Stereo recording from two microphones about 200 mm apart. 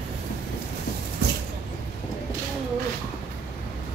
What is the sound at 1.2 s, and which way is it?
Vehicle, 55° right (ahead or behind).